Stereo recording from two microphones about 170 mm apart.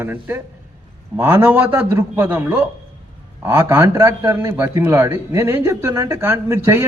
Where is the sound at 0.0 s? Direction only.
10° right (ahead or behind).